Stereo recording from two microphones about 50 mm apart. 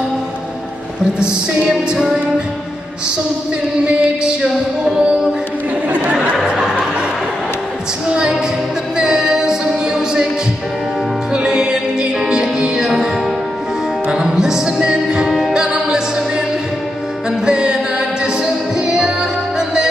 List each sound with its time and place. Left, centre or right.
1.7 s music: centre
3.8 s music: centre
6.3 s a sound: centre
8.1 s music: centre
11.3 s music: centre
14.1 s music: centre
17.5 s music: centre